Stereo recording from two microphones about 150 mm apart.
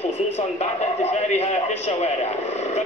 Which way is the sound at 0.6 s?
50° left (ahead or behind).